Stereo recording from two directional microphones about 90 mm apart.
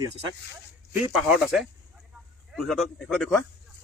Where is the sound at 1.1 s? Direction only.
5° right (ahead or behind).